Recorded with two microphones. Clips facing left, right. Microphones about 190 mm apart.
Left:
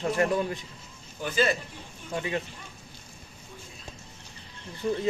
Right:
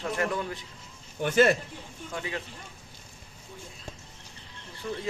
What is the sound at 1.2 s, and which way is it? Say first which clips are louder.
Speech: right 4 dB; 60° right (ahead or behind).